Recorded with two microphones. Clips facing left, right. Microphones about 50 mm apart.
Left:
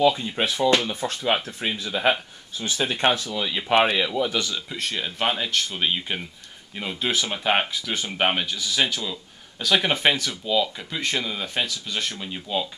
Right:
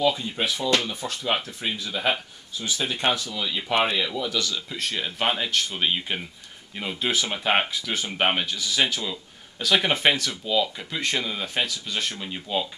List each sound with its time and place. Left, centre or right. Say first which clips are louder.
0.1 s speech: left 2 dB; left
4.6 s speech: even; centre